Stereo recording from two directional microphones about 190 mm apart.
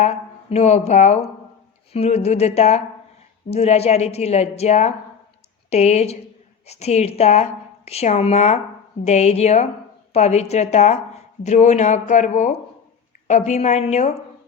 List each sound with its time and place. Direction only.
0.0 s a woman's voice: 35° left (ahead or behind)